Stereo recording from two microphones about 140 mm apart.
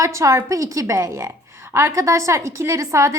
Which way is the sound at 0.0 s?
20° right (ahead or behind).